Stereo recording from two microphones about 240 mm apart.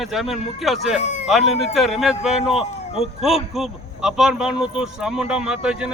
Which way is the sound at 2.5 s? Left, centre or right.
Left.